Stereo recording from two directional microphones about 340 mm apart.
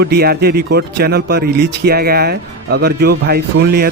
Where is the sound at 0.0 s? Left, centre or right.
Right.